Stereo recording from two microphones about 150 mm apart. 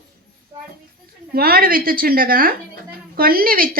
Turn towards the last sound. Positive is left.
turn(degrees=-75)  # may be behind; listen again after turning